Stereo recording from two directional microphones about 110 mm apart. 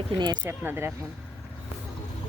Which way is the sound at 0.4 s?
15° right (ahead or behind).